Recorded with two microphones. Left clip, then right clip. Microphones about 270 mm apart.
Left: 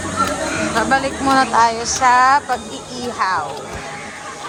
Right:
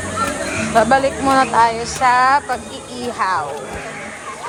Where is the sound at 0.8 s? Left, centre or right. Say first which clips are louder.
Right 5 dB; centre.